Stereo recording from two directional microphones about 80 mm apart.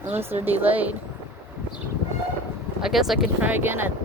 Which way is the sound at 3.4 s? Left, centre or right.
Right.